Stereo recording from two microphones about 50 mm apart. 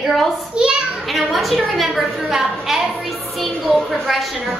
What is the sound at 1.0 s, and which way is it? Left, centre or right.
A woman's voice, centre.